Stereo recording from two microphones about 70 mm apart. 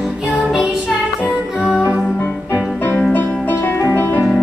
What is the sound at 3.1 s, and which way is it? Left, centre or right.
Music, left.